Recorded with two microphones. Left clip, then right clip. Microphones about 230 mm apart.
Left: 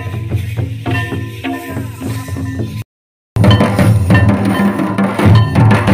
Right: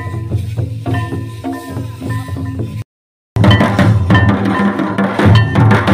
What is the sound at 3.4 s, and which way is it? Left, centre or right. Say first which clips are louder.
Music: even; left.